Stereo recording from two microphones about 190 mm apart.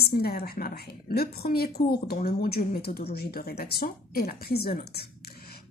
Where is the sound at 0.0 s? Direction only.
55° left (ahead or behind).